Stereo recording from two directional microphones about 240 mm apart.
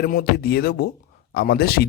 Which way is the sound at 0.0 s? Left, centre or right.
Left.